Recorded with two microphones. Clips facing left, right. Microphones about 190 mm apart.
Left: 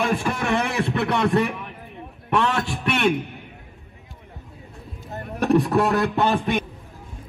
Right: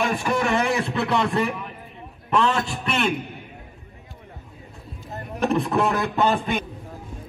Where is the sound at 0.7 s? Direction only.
60° left (ahead or behind).